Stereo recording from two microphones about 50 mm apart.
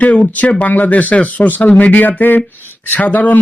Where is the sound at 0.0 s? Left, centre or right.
Left.